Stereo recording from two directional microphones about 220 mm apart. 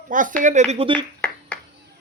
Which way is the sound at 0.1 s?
35° right (ahead or behind).